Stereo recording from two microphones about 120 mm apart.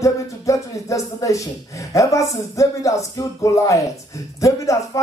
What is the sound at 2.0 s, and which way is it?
A man's voice, 25° left (ahead or behind).